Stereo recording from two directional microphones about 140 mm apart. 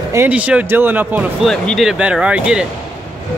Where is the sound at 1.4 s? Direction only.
Centre (ahead or behind).